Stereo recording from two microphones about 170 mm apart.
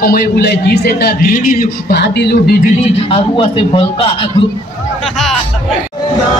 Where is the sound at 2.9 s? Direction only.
30° left (ahead or behind).